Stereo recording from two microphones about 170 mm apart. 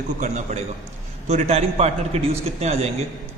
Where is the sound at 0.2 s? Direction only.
45° right (ahead or behind).